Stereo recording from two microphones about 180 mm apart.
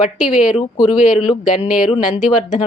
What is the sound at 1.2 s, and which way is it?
A woman's voice, 40° left (ahead or behind).